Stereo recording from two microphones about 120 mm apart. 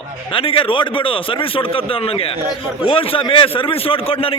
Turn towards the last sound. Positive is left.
turn(degrees=50)  # may be behind; listen again after turning